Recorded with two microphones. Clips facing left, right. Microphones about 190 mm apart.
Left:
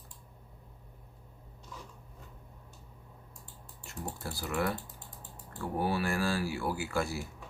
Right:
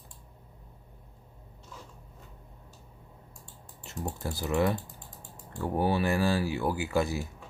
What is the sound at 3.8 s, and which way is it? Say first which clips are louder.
Speech: right 5 dB; 20° right (ahead or behind).